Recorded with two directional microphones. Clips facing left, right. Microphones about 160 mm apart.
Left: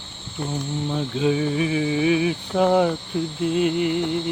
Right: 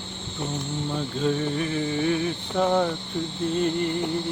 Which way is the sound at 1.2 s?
5° left (ahead or behind).